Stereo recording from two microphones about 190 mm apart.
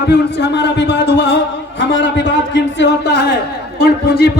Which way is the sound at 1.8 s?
80° left.